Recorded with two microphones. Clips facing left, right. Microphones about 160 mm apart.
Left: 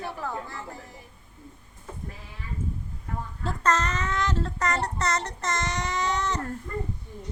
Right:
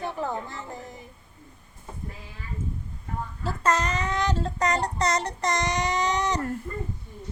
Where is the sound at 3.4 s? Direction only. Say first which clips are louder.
Right 1 dB; 10° right (ahead or behind).